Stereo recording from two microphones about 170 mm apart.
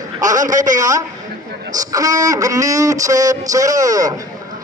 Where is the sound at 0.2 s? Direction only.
50° right (ahead or behind).